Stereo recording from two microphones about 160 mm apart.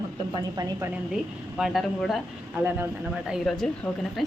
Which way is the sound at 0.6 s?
25° right (ahead or behind).